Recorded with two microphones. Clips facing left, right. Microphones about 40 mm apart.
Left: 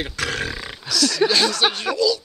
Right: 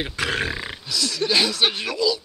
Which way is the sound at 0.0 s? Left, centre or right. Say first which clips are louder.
Right 1 dB; centre.